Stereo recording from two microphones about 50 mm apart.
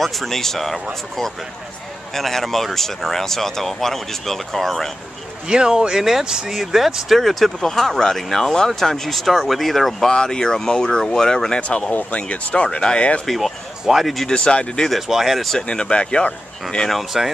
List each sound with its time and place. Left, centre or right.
0.0 s speech: centre
2.1 s speech: centre
5.5 s speech: centre
11.9 s speech: left
13.2 s speech: centre
14.2 s speech: centre
14.9 s speech: centre
15.6 s speech: centre
16.9 s speech: centre